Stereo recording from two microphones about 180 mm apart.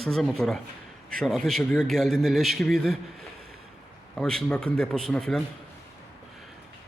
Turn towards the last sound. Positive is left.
turn(degrees=5)  # may be behind; listen again after turning